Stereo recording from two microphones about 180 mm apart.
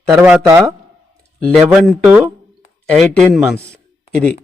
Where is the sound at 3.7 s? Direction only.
5° left (ahead or behind).